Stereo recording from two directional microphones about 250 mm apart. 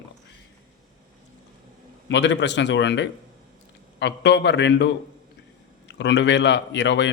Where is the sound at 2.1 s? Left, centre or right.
Left.